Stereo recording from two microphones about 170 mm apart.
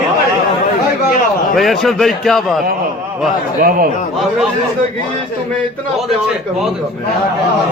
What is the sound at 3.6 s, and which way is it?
Speech, 55° right (ahead or behind).